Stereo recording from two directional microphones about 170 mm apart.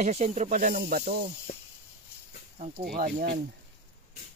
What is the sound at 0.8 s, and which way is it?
Speech, 65° right (ahead or behind).